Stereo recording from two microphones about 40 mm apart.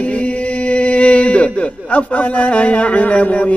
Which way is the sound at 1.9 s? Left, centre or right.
Left.